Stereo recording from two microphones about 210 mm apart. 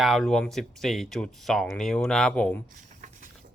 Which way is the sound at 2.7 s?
35° right (ahead or behind).